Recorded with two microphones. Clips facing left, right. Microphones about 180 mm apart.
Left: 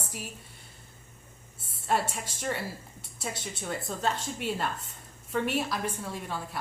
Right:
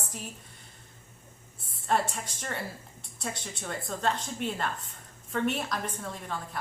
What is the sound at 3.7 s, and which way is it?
A woman's voice, 5° left (ahead or behind).